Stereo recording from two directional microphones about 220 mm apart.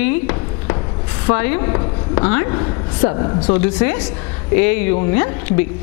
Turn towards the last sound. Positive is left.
turn(degrees=10)  # may be behind; listen again after turning